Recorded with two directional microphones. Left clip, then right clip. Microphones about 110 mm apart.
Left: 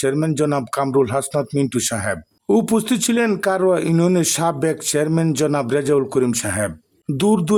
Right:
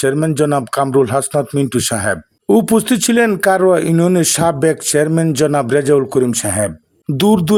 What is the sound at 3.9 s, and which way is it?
Speech, 25° right (ahead or behind).